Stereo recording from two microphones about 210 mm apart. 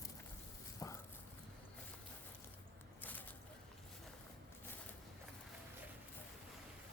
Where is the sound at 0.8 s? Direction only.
15° left (ahead or behind).